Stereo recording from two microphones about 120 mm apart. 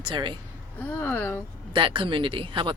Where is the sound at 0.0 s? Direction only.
40° right (ahead or behind).